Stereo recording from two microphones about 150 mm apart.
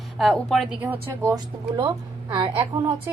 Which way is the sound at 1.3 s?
30° right (ahead or behind).